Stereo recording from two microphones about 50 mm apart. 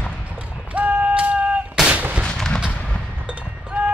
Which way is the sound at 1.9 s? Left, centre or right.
Right.